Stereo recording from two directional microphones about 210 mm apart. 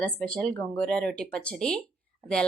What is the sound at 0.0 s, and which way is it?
A woman's voice, 5° left (ahead or behind).